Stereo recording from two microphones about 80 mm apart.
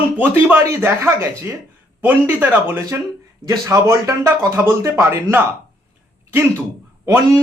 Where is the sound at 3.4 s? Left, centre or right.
Right.